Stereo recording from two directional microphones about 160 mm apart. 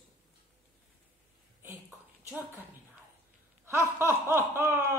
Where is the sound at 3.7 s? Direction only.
15° right (ahead or behind).